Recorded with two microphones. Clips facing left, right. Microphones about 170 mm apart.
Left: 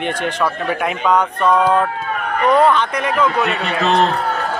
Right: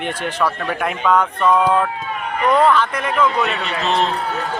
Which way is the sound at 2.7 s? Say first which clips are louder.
Left 1 dB; centre (ahead or behind).